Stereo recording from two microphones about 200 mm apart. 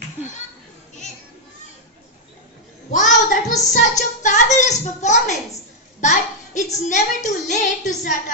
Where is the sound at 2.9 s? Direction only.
40° left (ahead or behind).